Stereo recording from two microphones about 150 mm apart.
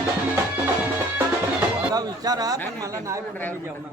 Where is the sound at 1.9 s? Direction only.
25° right (ahead or behind).